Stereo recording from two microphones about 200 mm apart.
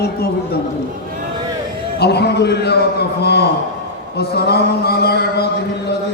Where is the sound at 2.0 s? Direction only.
55° left (ahead or behind).